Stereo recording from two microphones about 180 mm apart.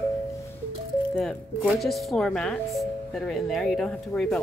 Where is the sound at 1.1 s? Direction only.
5° left (ahead or behind).